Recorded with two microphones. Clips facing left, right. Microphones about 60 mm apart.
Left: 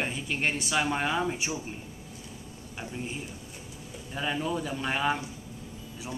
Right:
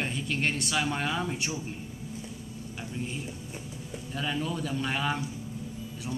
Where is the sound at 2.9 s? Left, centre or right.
Centre.